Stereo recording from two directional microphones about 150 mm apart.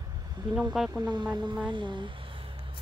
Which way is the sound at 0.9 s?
30° right (ahead or behind).